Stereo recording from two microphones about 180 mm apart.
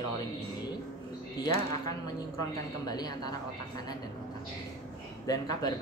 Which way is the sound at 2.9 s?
20° left (ahead or behind).